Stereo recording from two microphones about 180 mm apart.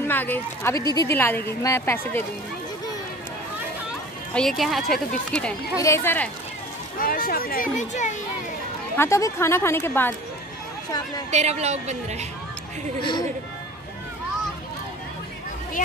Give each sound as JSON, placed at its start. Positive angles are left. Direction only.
{"t": 0.0, "sound": "speech", "side_deg": 10}
{"t": 4.3, "sound": "speech", "side_deg": 5}
{"t": 5.8, "sound": "speech", "side_deg": 15}
{"t": 7.0, "sound": "speech", "side_deg": 55}
{"t": 8.9, "sound": "speech", "side_deg": 15}
{"t": 11.2, "sound": "speech", "side_deg": -40}